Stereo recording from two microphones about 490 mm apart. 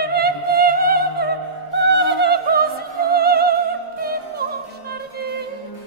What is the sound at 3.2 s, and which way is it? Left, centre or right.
Music, centre.